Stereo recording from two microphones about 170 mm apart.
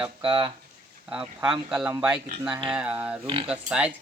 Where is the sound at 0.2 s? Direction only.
30° right (ahead or behind).